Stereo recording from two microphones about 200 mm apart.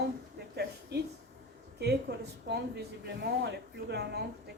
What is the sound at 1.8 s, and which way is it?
A woman's voice, 55° right (ahead or behind).